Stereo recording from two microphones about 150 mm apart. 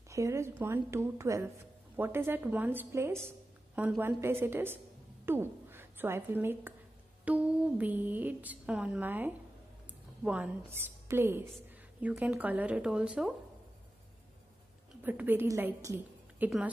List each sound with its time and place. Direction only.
0.1 s a woman's voice: 20° right (ahead or behind)
15.0 s a woman's voice: 10° right (ahead or behind)